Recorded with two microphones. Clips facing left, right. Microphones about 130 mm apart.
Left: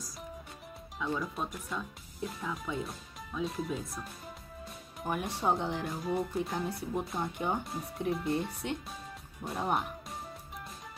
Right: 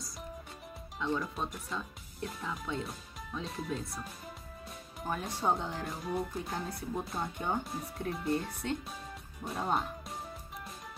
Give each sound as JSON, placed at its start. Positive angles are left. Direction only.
{"t": 0.9, "sound": "speech", "side_deg": 0}
{"t": 5.1, "sound": "speech", "side_deg": 15}
{"t": 5.9, "sound": "speech", "side_deg": 0}
{"t": 6.6, "sound": "speech", "side_deg": 15}
{"t": 7.1, "sound": "speech", "side_deg": 0}
{"t": 8.6, "sound": "speech", "side_deg": 20}
{"t": 9.4, "sound": "speech", "side_deg": 0}